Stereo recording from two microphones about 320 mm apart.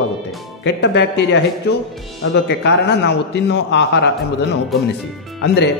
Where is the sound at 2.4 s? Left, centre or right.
Left.